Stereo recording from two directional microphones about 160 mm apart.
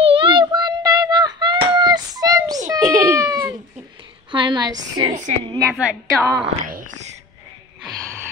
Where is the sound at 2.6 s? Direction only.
20° right (ahead or behind).